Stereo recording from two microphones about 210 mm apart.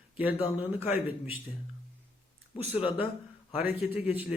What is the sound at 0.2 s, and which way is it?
A man's voice, 5° right (ahead or behind).